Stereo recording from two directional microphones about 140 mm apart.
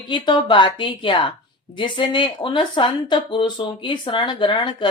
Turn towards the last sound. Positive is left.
turn(degrees=35)  # may be behind; listen again after turning